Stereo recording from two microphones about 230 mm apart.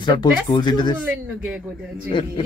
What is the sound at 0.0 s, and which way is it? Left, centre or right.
Speech, centre.